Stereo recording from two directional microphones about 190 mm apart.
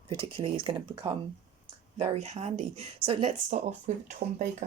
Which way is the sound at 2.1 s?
35° right (ahead or behind).